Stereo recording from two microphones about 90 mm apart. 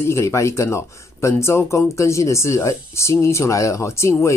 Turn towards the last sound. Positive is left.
turn(degrees=30)  # may be behind; listen again after turning